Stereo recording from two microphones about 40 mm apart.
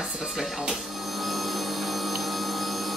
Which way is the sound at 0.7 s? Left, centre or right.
Centre.